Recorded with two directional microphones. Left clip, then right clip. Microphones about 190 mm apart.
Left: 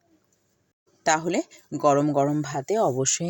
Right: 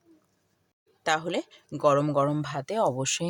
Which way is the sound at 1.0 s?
15° left (ahead or behind).